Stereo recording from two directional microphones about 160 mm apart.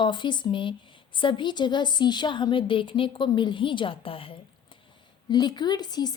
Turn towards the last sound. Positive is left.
turn(degrees=25)  # may be behind; listen again after turning